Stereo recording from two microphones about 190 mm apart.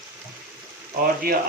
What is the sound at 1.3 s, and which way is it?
Speech, 50° right (ahead or behind).